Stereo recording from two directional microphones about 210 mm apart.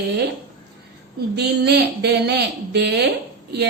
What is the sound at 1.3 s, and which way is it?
A woman's voice, 50° right (ahead or behind).